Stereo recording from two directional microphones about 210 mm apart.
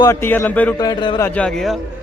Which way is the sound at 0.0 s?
15° left (ahead or behind).